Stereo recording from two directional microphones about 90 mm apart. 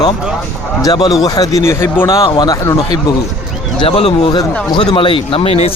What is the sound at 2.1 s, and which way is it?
Speech, 70° left (ahead or behind).